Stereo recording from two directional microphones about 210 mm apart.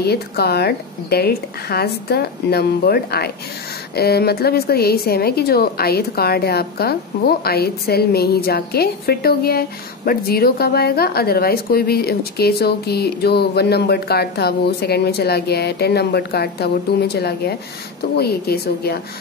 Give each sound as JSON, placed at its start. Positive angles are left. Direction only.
{"t": 0.0, "sound": "a woman's voice", "side_deg": 50}